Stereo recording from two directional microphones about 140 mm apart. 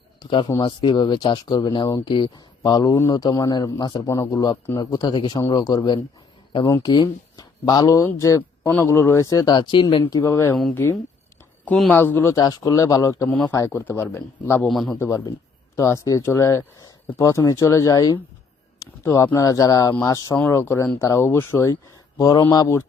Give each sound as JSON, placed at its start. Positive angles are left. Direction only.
{"t": 0.2, "sound": "speech", "side_deg": 35}
{"t": 14.7, "sound": "a man's voice", "side_deg": 0}
{"t": 14.9, "sound": "speech", "side_deg": 15}